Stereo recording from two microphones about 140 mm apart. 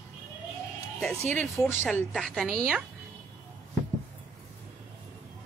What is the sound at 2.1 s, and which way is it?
Speech, centre (ahead or behind).